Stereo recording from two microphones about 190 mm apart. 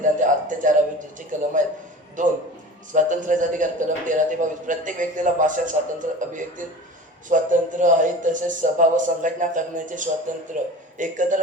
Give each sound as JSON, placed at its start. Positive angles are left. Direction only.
{"t": 0.0, "sound": "a man's voice", "side_deg": -40}